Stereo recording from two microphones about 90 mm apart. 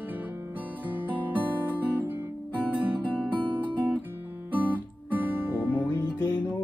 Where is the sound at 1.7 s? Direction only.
20° right (ahead or behind).